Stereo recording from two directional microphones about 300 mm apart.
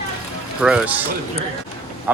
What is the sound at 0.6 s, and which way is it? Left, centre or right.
Speech, centre.